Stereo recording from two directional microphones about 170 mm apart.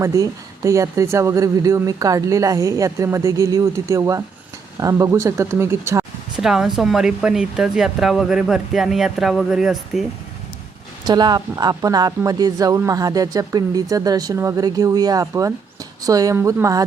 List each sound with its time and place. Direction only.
0.0 s speech: 20° right (ahead or behind)
6.4 s speech: 5° right (ahead or behind)
11.0 s speech: 25° right (ahead or behind)